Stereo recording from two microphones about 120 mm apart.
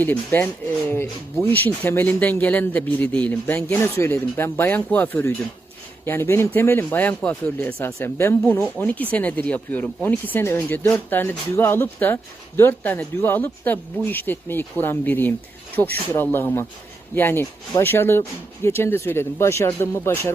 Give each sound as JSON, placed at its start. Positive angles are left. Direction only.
{"t": 0.0, "sound": "speech", "side_deg": 15}